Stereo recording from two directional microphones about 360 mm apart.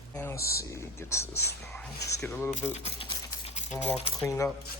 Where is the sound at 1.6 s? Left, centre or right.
Centre.